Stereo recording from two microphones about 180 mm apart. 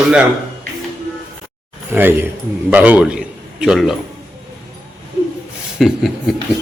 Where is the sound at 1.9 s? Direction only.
10° right (ahead or behind).